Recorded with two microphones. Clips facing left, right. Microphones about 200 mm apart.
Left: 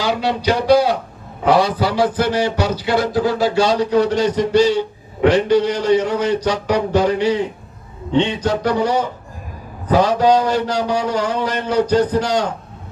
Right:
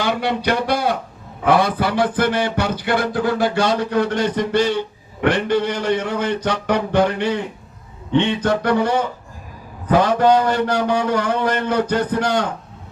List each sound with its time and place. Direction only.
0.0 s speech: 55° right (ahead or behind)
8.4 s speech: 55° right (ahead or behind)